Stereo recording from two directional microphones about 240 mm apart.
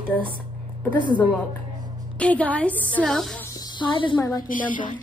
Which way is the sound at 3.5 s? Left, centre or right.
Centre.